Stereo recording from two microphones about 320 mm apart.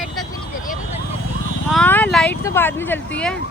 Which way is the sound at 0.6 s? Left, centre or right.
Left.